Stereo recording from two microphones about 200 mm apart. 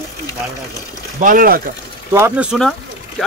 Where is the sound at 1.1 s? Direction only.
40° right (ahead or behind).